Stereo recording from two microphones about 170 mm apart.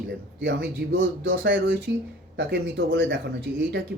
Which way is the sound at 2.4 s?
85° right.